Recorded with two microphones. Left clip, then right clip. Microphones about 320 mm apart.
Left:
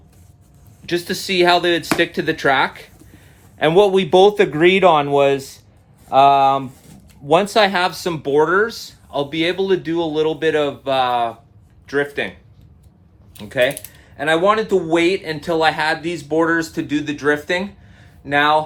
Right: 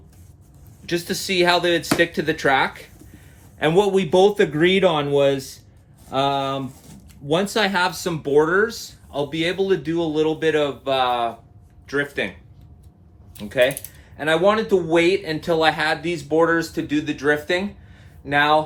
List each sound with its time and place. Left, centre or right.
0.9 s speech: left
13.3 s speech: left